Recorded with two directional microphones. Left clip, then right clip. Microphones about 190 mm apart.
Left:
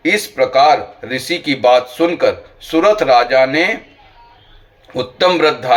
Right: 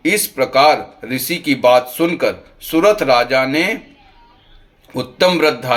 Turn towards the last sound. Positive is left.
turn(degrees=-45)  # may be behind; listen again after turning